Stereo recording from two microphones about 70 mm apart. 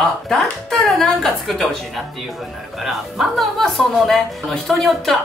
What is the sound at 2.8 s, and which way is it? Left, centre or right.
A woman's voice, centre.